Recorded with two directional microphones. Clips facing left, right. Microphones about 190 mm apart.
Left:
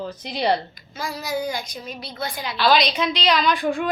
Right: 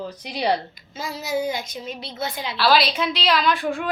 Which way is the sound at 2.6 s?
5° right (ahead or behind).